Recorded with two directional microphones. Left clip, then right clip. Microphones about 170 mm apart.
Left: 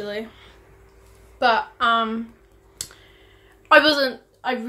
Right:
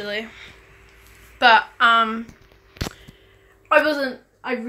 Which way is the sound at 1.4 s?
5° left (ahead or behind).